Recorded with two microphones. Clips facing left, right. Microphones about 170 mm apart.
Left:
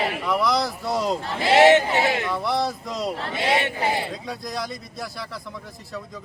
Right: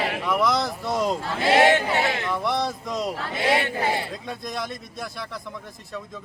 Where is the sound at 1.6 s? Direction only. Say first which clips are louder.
Left 7 dB; 20° left (ahead or behind).